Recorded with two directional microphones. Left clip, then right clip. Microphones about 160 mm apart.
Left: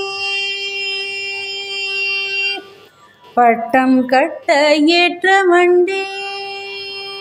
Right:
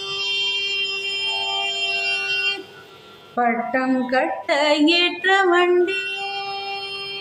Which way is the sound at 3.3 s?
50° left (ahead or behind).